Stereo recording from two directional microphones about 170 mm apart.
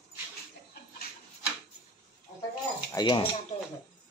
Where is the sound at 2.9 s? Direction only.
25° left (ahead or behind).